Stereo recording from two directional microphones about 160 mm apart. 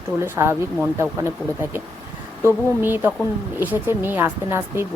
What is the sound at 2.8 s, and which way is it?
Speech, 15° right (ahead or behind).